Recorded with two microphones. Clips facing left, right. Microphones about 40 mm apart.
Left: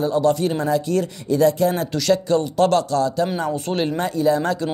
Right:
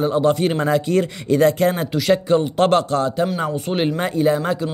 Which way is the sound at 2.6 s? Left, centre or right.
Right.